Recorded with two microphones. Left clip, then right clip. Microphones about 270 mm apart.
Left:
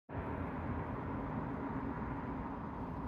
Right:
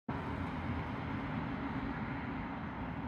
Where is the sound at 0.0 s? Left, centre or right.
Right.